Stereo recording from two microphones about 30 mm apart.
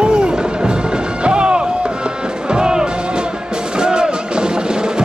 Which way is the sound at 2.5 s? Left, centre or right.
Right.